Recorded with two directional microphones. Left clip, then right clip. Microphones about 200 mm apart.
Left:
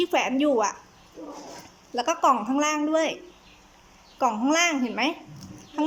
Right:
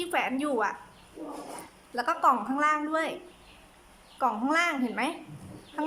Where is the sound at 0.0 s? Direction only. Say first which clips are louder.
Left 6 dB; 15° left (ahead or behind).